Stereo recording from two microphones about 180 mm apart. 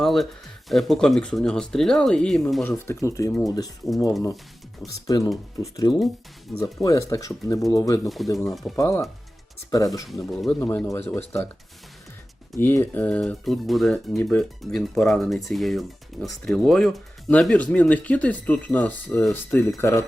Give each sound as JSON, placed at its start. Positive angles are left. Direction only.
{"t": 0.0, "sound": "speech", "side_deg": 0}
{"t": 2.8, "sound": "speech", "side_deg": 15}
{"t": 5.0, "sound": "speech", "side_deg": 20}
{"t": 8.0, "sound": "speech", "side_deg": 0}
{"t": 8.7, "sound": "speech", "side_deg": 15}
{"t": 10.1, "sound": "speech", "side_deg": 0}
{"t": 10.6, "sound": "speech", "side_deg": 10}
{"t": 12.5, "sound": "speech", "side_deg": 10}